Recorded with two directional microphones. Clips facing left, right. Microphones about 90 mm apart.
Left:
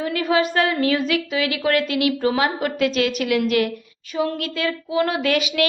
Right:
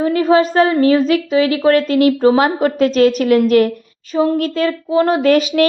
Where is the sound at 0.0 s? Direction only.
35° right (ahead or behind).